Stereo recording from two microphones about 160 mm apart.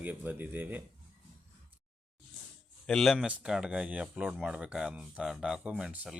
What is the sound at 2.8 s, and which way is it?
Speech, centre (ahead or behind).